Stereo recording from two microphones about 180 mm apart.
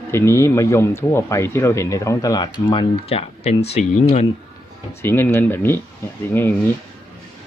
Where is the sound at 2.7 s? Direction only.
30° left (ahead or behind).